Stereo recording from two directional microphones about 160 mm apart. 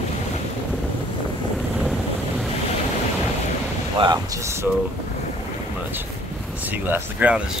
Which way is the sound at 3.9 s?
25° right (ahead or behind).